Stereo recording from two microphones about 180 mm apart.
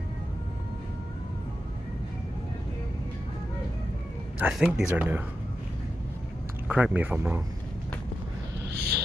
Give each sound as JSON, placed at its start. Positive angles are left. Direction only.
{"t": 4.4, "sound": "speech", "side_deg": -5}
{"t": 6.7, "sound": "speech", "side_deg": -10}
{"t": 8.6, "sound": "a sound", "side_deg": -60}